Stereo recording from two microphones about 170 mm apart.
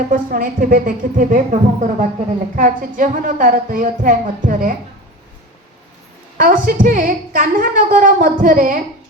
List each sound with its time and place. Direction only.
0.1 s a woman's voice: 55° right (ahead or behind)
6.3 s a woman's voice: 50° right (ahead or behind)